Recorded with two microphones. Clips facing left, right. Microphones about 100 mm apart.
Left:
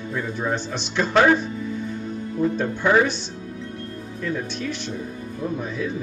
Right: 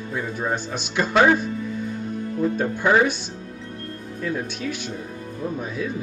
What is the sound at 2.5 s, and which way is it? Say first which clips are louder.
Speech: even; 10° right (ahead or behind).